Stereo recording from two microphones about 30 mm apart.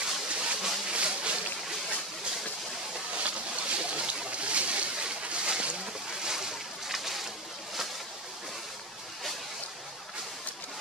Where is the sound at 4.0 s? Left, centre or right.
Right.